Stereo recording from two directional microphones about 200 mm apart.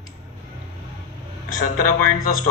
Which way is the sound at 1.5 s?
45° left (ahead or behind).